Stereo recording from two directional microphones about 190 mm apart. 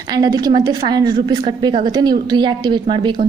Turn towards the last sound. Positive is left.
turn(degrees=-25)  # may be behind; listen again after turning